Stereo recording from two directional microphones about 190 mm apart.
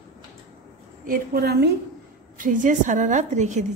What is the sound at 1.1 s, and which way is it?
Speech, 55° right (ahead or behind).